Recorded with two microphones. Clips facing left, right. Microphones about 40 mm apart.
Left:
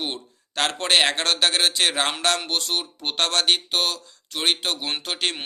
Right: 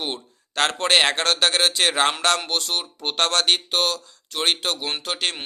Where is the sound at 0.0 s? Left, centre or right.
Centre.